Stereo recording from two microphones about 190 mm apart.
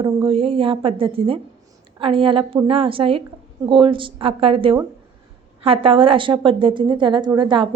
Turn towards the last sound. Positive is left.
turn(degrees=-25)  # may be behind; listen again after turning